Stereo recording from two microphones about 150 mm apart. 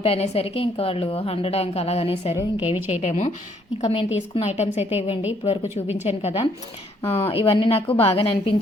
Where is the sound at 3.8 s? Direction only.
40° left (ahead or behind).